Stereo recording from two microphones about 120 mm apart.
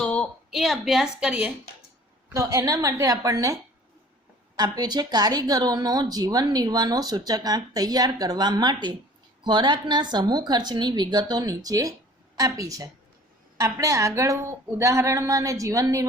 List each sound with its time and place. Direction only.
0.0 s a woman's voice: 5° left (ahead or behind); by 1.5 s 10° right (ahead or behind)
2.3 s a woman's voice: 25° right (ahead or behind)